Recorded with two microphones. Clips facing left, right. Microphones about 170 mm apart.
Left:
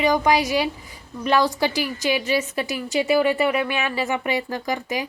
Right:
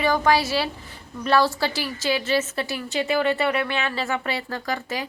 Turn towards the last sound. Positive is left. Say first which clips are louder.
# left 2 dB
turn(degrees=15)  # may be behind; listen again after turning